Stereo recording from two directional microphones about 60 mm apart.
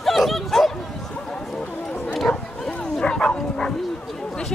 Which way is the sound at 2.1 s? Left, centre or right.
Centre.